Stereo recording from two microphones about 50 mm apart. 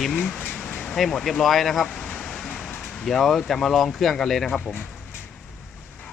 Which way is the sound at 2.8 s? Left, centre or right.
Centre.